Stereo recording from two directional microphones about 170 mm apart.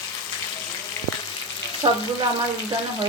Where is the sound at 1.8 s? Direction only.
25° right (ahead or behind).